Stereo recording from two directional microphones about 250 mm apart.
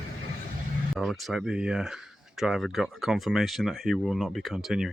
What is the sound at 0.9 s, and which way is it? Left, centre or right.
Speech, centre.